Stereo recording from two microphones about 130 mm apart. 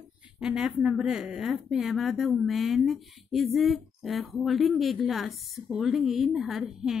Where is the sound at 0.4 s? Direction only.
5° right (ahead or behind).